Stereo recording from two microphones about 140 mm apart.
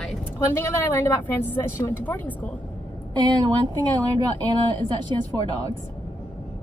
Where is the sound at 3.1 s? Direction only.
30° right (ahead or behind).